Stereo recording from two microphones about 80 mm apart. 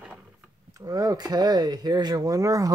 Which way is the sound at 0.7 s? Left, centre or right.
Right.